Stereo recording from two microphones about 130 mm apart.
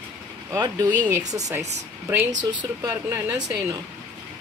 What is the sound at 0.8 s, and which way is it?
Speech, 15° right (ahead or behind).